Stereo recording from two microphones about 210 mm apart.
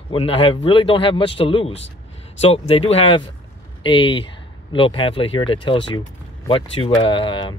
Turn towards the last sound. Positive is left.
turn(degrees=25)  # may be behind; listen again after turning